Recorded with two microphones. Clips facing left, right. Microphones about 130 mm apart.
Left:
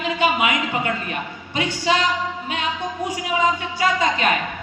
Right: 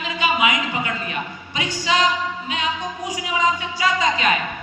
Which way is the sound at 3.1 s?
55° left (ahead or behind).